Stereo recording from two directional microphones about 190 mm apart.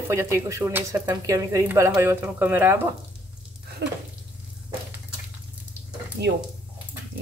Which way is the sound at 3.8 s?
60° right (ahead or behind).